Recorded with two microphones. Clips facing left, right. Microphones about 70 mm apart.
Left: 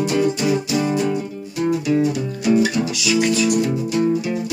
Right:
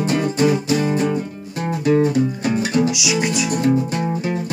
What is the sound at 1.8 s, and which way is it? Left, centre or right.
Music, right.